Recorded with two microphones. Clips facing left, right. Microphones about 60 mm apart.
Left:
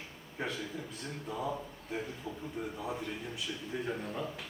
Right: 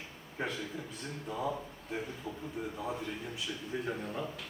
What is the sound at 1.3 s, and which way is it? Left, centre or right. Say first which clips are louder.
A man's voice: right 1 dB; centre.